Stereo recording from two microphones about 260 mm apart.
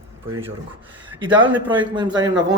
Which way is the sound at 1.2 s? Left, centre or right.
Centre.